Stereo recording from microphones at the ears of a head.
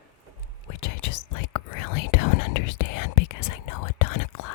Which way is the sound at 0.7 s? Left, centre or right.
Left.